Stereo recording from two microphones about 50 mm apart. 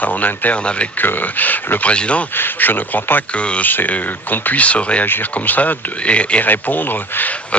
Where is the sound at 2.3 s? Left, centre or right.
Left.